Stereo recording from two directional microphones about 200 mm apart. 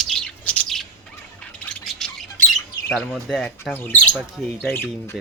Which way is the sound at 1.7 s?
Centre (ahead or behind).